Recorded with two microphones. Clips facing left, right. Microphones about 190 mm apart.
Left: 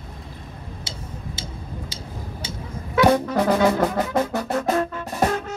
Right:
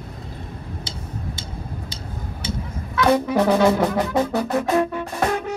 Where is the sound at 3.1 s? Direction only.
10° right (ahead or behind).